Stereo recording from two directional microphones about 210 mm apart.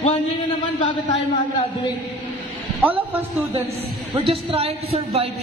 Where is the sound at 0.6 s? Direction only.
20° left (ahead or behind).